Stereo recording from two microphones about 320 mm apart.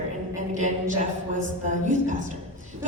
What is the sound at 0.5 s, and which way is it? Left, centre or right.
Speech, right.